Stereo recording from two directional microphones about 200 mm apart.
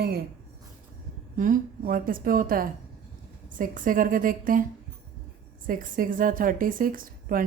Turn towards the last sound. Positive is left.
turn(degrees=-45)  # may be behind; listen again after turning